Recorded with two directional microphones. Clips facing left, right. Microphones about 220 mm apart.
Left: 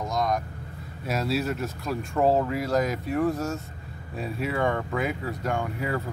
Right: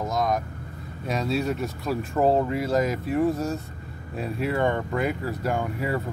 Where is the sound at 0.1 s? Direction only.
Centre (ahead or behind).